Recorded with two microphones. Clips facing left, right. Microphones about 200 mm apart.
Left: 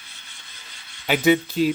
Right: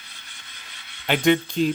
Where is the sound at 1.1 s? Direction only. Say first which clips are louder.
Left 1 dB; 5° left (ahead or behind).